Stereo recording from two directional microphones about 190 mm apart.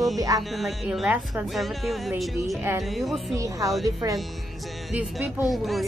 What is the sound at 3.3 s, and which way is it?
Speech, 15° right (ahead or behind).